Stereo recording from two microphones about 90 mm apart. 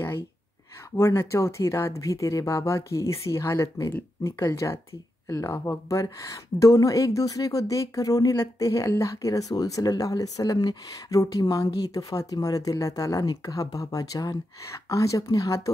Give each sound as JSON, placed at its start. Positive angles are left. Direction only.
{"t": 0.9, "sound": "speech", "side_deg": 25}